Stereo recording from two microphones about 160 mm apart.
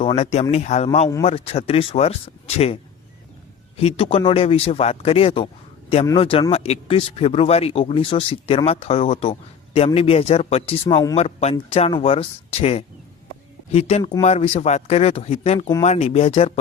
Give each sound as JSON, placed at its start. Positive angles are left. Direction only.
{"t": 0.0, "sound": "a man's voice", "side_deg": 40}
{"t": 3.8, "sound": "speech", "side_deg": 35}